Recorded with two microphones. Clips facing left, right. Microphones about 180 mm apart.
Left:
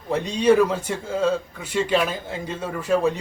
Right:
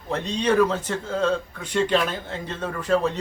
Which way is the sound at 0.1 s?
10° left (ahead or behind).